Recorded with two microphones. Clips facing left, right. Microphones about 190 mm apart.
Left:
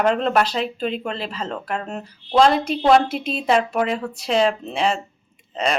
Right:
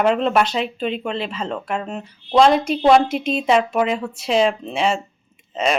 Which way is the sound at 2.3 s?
Centre (ahead or behind).